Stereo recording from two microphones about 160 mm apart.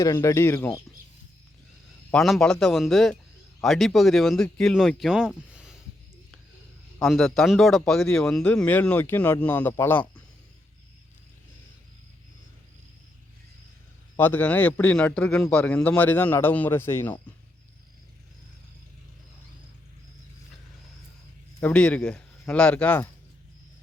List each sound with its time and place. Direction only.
0.0 s a man's voice: 20° left (ahead or behind)
2.1 s speech: centre (ahead or behind)
7.0 s a man's voice: centre (ahead or behind)
14.2 s a man's voice: 10° left (ahead or behind)
21.6 s a man's voice: 5° left (ahead or behind)